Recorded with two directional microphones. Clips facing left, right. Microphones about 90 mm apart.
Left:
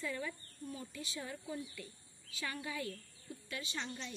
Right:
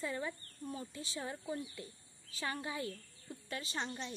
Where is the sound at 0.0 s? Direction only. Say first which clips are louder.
Right 2 dB; 30° right (ahead or behind).